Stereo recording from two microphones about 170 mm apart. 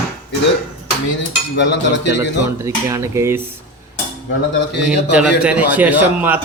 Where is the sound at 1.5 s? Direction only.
90° left.